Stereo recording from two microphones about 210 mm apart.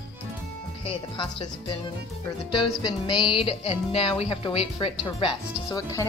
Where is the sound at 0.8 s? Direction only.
25° left (ahead or behind).